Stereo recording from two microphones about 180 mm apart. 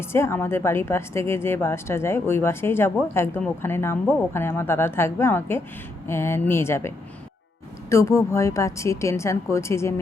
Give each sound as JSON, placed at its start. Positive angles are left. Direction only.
{"t": 0.0, "sound": "a woman's voice", "side_deg": 15}